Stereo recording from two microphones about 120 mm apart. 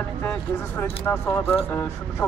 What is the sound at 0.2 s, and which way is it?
Speech, 15° left (ahead or behind).